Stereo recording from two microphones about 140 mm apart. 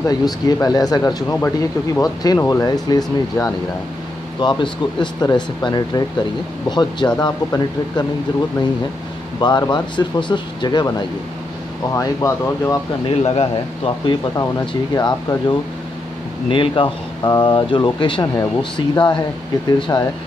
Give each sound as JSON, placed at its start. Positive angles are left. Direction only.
{"t": 0.1, "sound": "speech", "side_deg": 30}
{"t": 9.4, "sound": "speech", "side_deg": 30}
{"t": 13.0, "sound": "a man's voice", "side_deg": 45}
{"t": 14.7, "sound": "speech", "side_deg": 30}